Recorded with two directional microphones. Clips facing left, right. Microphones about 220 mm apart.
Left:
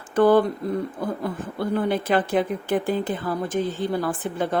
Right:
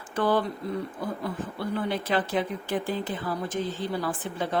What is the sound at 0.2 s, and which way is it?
Speech, 50° left (ahead or behind).